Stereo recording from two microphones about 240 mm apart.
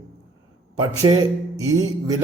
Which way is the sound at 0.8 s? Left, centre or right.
Centre.